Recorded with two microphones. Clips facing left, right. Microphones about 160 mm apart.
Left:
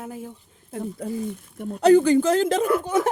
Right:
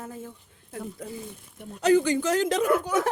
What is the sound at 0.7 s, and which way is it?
A woman's voice, 30° left (ahead or behind).